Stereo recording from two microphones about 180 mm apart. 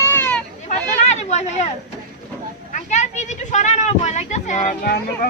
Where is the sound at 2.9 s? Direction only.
40° left (ahead or behind).